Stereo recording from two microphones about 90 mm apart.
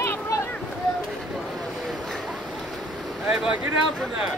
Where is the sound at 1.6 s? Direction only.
5° left (ahead or behind).